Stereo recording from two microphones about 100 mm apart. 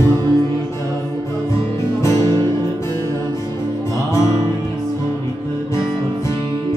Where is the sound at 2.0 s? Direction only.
35° left (ahead or behind).